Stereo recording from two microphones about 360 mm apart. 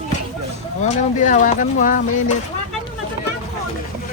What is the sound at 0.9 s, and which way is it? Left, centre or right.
Speech, centre.